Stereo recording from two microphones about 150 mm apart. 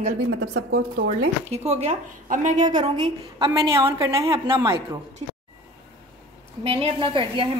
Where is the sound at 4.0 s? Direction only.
20° right (ahead or behind).